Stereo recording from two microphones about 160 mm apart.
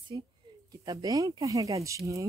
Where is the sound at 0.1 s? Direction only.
25° right (ahead or behind).